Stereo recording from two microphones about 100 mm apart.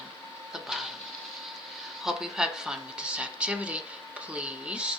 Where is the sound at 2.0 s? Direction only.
5° right (ahead or behind).